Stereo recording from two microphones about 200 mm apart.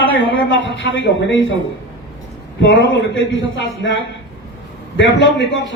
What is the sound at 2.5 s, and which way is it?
A man's voice, 65° left (ahead or behind).